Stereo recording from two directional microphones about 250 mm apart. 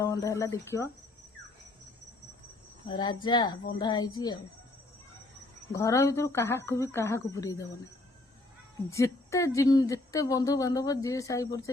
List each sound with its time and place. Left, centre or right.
0.0 s speech: centre
2.8 s speech: centre
5.7 s speech: centre
8.9 s speech: centre